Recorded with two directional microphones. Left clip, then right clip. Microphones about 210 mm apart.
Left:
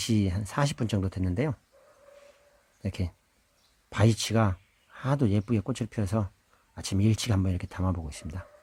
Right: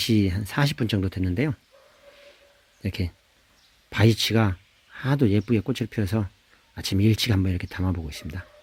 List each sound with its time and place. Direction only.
0.0 s speech: 10° left (ahead or behind)
2.8 s speech: 10° left (ahead or behind)